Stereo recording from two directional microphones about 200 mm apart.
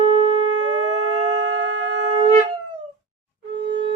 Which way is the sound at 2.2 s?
30° right (ahead or behind).